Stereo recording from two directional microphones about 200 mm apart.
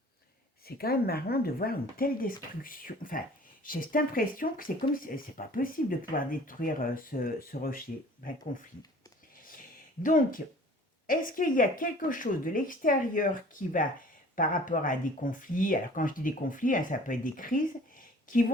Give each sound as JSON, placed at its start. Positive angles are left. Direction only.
{"t": 0.6, "sound": "speech", "side_deg": 50}
{"t": 9.4, "sound": "a sound", "side_deg": 45}
{"t": 11.0, "sound": "a woman's voice", "side_deg": 45}